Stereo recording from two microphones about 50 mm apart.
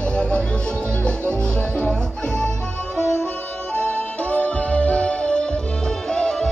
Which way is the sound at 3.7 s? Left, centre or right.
Left.